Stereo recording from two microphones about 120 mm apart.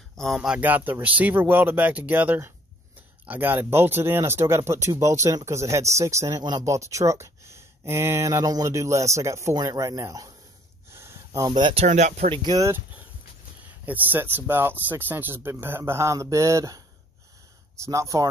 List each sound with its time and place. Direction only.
0.2 s speech: centre (ahead or behind); by 10.3 s 30° right (ahead or behind)
10.9 s a sound: 20° right (ahead or behind)
11.8 s speech: 85° right
12.5 s speech: 25° right (ahead or behind)
13.8 s speech: 15° right (ahead or behind)